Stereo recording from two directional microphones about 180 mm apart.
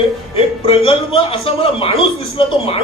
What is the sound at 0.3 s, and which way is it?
A man's voice, 30° left (ahead or behind).